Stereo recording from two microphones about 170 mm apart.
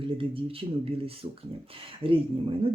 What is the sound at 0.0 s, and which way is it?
Speech, 30° right (ahead or behind).